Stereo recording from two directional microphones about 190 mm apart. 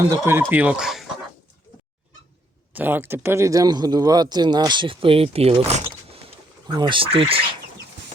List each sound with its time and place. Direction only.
0.2 s speech: 10° right (ahead or behind)
2.7 s speech: 10° right (ahead or behind); by 7.4 s 30° right (ahead or behind)